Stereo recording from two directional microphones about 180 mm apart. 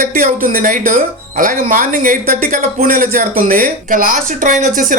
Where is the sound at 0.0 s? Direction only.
50° right (ahead or behind).